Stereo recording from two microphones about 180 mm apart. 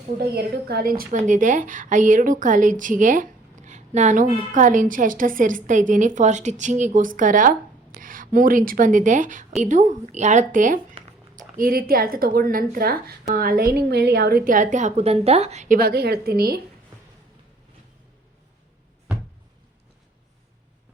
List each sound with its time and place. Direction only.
0.2 s a woman's voice: 60° right (ahead or behind); by 15.8 s 40° right (ahead or behind)
15.8 s a woman's voice: 60° right (ahead or behind)